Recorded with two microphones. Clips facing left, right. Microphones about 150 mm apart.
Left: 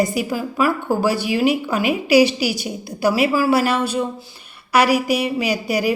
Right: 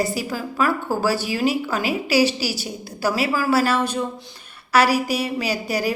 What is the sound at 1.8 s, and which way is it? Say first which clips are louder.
Speech: left 3 dB; 35° right (ahead or behind).